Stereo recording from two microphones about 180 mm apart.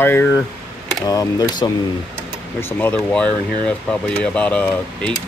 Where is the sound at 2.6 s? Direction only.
10° left (ahead or behind).